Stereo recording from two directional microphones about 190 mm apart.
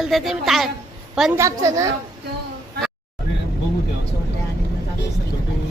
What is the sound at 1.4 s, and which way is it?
Speech, 15° right (ahead or behind).